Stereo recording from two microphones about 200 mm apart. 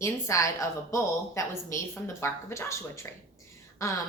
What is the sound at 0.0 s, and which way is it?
A woman's voice, 15° left (ahead or behind).